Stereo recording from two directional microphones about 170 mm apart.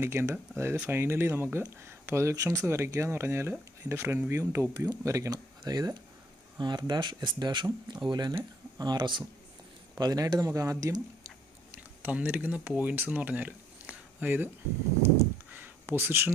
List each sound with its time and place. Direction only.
0.0 s speech: 15° right (ahead or behind)
12.0 s speech: 10° right (ahead or behind)
15.5 s a sound: 10° right (ahead or behind)